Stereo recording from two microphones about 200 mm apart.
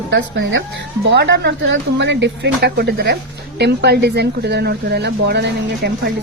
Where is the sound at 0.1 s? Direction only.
60° right (ahead or behind).